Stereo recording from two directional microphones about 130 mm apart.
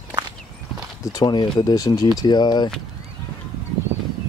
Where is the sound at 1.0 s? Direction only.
30° left (ahead or behind).